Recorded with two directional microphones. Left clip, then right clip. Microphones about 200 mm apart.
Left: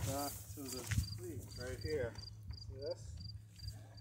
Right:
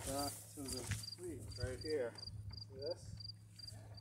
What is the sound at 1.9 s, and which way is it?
Cricket, 5° left (ahead or behind).